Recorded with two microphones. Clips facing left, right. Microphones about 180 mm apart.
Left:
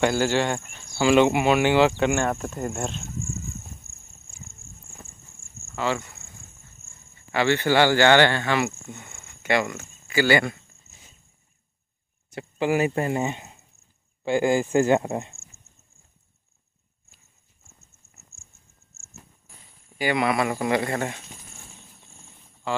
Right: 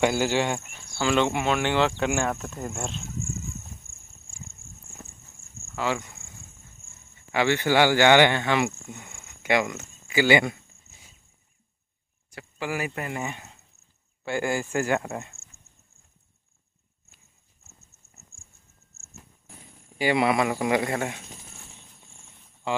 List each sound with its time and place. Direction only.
0.0 s speech: 10° right (ahead or behind)
0.9 s speech: 10° left (ahead or behind)
5.8 s speech: 5° right (ahead or behind)
7.3 s speech: 10° right (ahead or behind)
12.3 s speech: 25° left (ahead or behind)
15.5 s horse: 55° right (ahead or behind)
20.0 s speech: 25° right (ahead or behind); by 21.2 s 10° right (ahead or behind)